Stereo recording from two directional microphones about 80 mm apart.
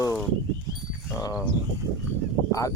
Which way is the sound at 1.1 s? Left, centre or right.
Left.